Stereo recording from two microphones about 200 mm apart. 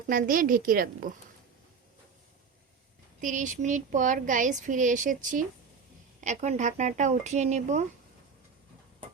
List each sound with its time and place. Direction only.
0.1 s speech: 45° right (ahead or behind)
3.2 s speech: 40° right (ahead or behind)